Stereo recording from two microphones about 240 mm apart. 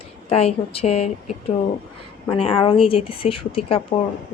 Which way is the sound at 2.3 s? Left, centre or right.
Left.